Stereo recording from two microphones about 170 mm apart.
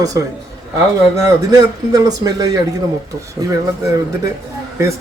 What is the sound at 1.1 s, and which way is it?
A man's voice, 20° right (ahead or behind).